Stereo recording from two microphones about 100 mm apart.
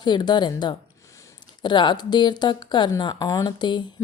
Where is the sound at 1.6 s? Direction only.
50° left (ahead or behind).